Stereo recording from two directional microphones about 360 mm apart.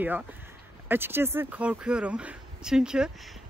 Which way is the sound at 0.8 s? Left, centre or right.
Centre.